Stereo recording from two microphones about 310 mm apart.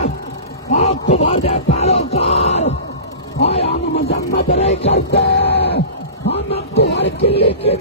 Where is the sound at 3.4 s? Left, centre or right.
Centre.